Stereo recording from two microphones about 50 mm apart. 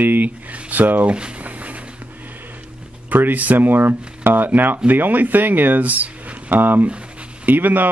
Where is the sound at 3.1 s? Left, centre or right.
Right.